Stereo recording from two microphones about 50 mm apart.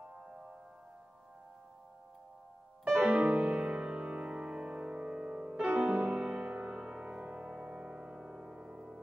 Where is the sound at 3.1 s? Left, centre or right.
Right.